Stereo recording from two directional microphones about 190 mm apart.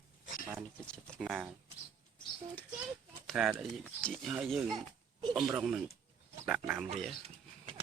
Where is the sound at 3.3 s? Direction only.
5° right (ahead or behind).